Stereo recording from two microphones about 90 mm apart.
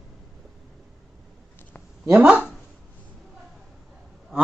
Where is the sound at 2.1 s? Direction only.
15° right (ahead or behind).